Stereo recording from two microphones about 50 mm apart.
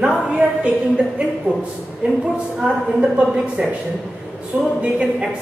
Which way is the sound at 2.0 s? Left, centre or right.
Right.